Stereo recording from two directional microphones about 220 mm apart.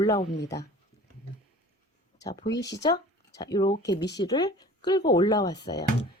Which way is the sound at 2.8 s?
15° left (ahead or behind).